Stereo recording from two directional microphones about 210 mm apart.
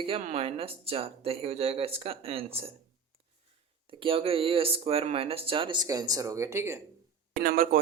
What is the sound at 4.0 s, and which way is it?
Speech, 25° right (ahead or behind).